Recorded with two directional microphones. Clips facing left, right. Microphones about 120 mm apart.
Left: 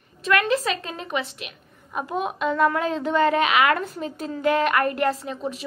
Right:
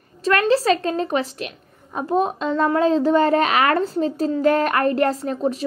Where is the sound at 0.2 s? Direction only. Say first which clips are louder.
Right 4 dB; 35° right (ahead or behind).